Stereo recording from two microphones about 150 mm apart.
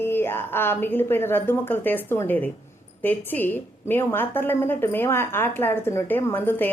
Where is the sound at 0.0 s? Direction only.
15° left (ahead or behind).